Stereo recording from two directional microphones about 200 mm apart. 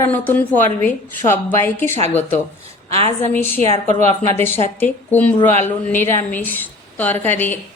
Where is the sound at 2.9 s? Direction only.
30° right (ahead or behind).